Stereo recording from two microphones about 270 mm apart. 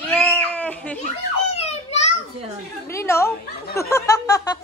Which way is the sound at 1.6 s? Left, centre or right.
Left.